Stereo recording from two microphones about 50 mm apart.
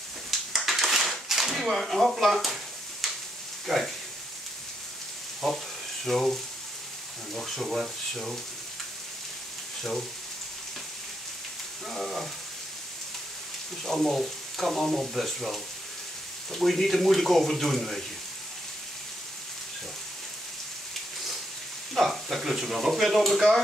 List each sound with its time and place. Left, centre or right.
0.6 s a sound: centre
3.6 s speech: centre
5.4 s speech: centre
7.3 s speech: centre
11.9 s frying: centre
13.8 s speech: centre
21.9 s speech: centre